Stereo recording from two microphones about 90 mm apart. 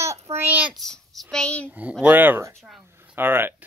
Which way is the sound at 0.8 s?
5° left (ahead or behind).